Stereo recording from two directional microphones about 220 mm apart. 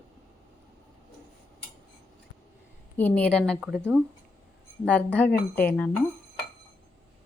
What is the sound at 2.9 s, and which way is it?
A woman's voice, 5° left (ahead or behind).